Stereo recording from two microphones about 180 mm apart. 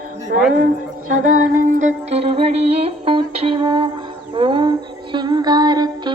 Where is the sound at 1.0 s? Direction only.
45° right (ahead or behind).